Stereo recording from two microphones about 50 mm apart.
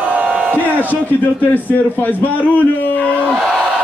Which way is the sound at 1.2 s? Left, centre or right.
Left.